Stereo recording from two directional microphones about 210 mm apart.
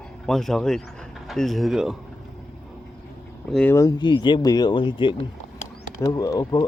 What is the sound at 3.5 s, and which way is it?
Speech, 5° left (ahead or behind).